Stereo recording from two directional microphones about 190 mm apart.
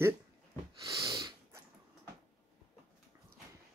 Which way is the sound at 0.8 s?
15° right (ahead or behind).